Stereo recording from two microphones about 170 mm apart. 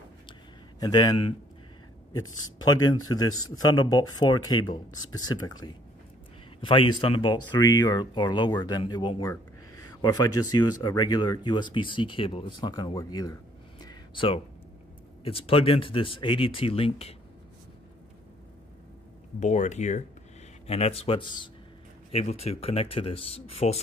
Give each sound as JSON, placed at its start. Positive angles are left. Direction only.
{"t": 0.3, "sound": "a sound", "side_deg": 25}
{"t": 2.1, "sound": "speech", "side_deg": 20}
{"t": 13.8, "sound": "a sound", "side_deg": 30}
{"t": 15.2, "sound": "speech", "side_deg": 35}
{"t": 19.4, "sound": "speech", "side_deg": 45}
{"t": 22.1, "sound": "speech", "side_deg": 40}